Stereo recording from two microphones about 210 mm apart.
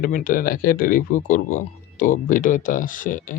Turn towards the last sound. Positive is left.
turn(degrees=40)  # may be behind; listen again after turning